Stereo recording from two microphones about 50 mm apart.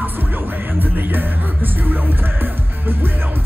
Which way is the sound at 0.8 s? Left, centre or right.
Right.